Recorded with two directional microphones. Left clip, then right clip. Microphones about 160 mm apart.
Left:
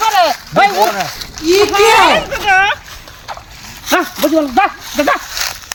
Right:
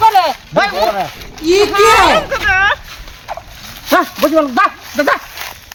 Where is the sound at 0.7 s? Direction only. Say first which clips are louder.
Left 1 dB; 90° left.